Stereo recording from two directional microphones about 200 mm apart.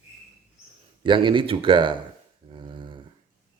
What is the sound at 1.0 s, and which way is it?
Speech, 25° right (ahead or behind).